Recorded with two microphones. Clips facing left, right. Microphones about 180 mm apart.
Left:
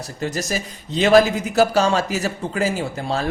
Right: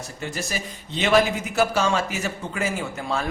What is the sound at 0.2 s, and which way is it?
Speech, 40° left (ahead or behind).